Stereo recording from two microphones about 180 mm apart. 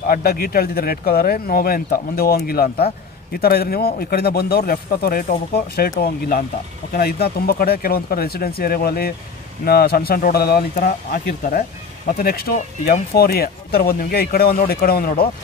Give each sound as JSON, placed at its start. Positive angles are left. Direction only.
{"t": 0.1, "sound": "speech", "side_deg": 55}